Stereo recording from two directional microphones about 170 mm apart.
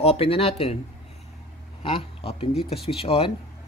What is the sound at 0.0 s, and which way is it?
Speech, 35° left (ahead or behind).